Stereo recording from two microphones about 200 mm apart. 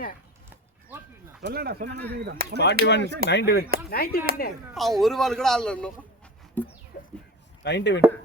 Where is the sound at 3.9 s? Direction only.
50° left (ahead or behind).